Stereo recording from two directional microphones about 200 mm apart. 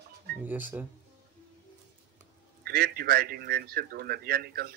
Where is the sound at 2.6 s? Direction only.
50° right (ahead or behind).